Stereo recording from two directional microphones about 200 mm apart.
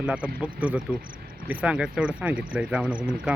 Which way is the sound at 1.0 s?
45° right (ahead or behind).